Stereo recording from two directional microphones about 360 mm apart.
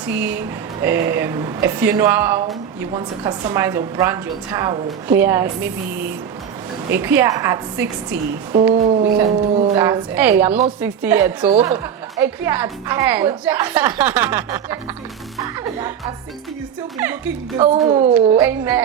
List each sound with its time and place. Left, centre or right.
0.0 s a woman's voice: centre
8.7 s a woman's voice: centre
11.4 s a woman's voice: centre
15.4 s music: centre
17.6 s speech: centre